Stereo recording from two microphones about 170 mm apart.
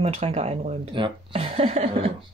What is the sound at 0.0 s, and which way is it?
Speech, 35° right (ahead or behind).